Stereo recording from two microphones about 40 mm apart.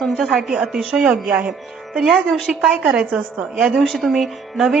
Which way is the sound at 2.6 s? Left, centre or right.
Centre.